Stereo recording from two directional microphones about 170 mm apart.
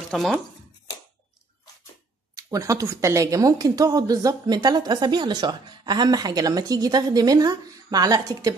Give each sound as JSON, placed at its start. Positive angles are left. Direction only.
{"t": 0.1, "sound": "speech", "side_deg": 0}
{"t": 2.3, "sound": "a woman's voice", "side_deg": -20}